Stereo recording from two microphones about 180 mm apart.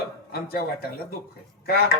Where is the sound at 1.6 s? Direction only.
60° left (ahead or behind).